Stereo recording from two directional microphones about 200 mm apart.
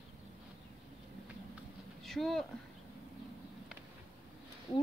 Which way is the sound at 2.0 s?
Centre (ahead or behind).